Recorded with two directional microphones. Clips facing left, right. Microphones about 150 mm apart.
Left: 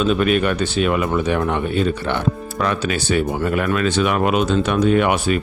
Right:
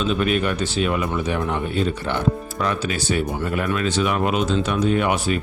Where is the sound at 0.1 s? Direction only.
65° left (ahead or behind).